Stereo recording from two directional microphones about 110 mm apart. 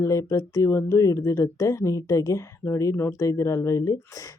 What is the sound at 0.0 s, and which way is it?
Speech, 30° left (ahead or behind).